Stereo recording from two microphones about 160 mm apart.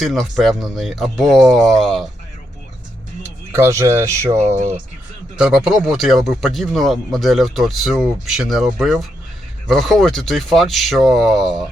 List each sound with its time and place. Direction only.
0.0 s speech: centre (ahead or behind)
3.5 s speech: 15° right (ahead or behind)
5.4 s speech: 5° right (ahead or behind)